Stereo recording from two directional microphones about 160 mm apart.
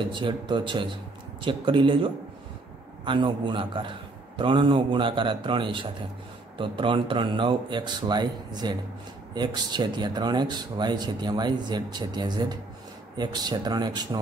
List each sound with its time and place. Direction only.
0.1 s a man's voice: 30° right (ahead or behind)